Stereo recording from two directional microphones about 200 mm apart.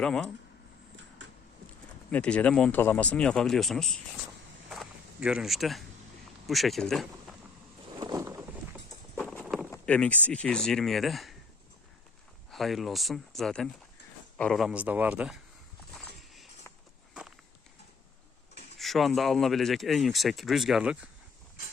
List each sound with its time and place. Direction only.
0.0 s speech: 5° left (ahead or behind)
2.0 s speech: 5° left (ahead or behind)
4.7 s walk: centre (ahead or behind)
6.5 s speech: centre (ahead or behind)
7.9 s a sound: 15° right (ahead or behind)
9.3 s a sound: centre (ahead or behind)
9.6 s vehicle: 10° left (ahead or behind)
10.2 s speech: 5° left (ahead or behind)
12.5 s speech: centre (ahead or behind)
15.9 s a sound: centre (ahead or behind)
18.8 s speech: centre (ahead or behind)